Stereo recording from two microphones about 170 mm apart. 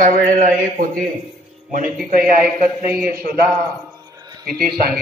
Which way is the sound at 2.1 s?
55° right (ahead or behind).